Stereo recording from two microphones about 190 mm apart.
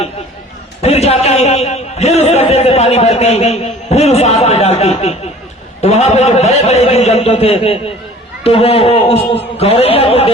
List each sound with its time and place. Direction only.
0.8 s a man's voice: 35° left (ahead or behind)